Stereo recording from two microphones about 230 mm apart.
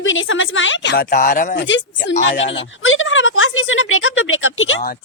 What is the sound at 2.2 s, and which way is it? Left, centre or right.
Speech, left.